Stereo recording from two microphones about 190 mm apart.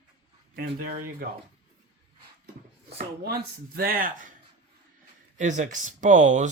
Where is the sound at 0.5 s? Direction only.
50° right (ahead or behind).